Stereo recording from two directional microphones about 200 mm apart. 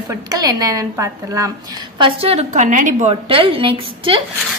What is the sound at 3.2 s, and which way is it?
Speech, 25° right (ahead or behind).